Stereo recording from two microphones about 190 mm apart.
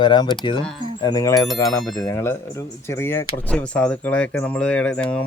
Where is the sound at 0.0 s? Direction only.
25° left (ahead or behind).